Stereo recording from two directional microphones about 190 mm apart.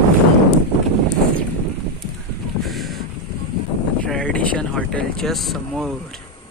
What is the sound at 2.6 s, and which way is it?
Boat, centre (ahead or behind).